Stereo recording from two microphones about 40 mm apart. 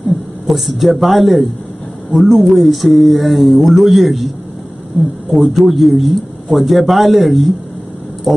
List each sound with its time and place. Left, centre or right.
0.5 s a man's voice: centre
2.2 s speech: centre
2.6 s a man's voice: centre
5.3 s a man's voice: centre